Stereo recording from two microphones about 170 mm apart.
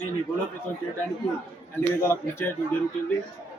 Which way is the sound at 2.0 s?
15° left (ahead or behind).